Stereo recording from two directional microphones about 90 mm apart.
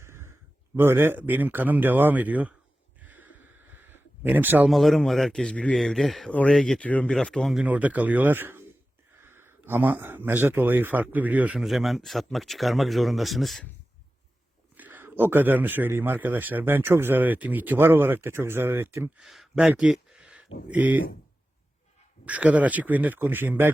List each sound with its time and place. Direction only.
0.0 s a sound: 30° right (ahead or behind)
0.8 s speech: 25° right (ahead or behind)
3.0 s a sound: 20° right (ahead or behind)
4.7 s speech: centre (ahead or behind)
7.5 s speech: 15° right (ahead or behind)
11.6 s speech: centre (ahead or behind)
14.8 s speech: 20° right (ahead or behind)
19.2 s speech: 5° right (ahead or behind)
22.3 s speech: 15° right (ahead or behind)